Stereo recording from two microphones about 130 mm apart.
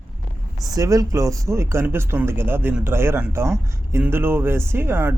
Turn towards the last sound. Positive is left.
turn(degrees=-15)  # may be behind; listen again after turning